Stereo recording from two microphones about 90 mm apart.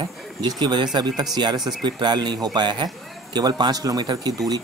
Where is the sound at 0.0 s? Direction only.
55° right (ahead or behind).